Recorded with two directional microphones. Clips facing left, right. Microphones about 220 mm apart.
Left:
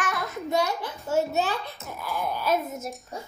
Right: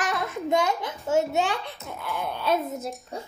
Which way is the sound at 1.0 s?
90° right.